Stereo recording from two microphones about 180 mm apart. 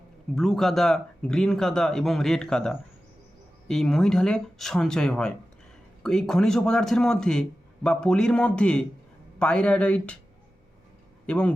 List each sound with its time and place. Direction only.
0.3 s speech: centre (ahead or behind)
11.3 s speech: 5° left (ahead or behind)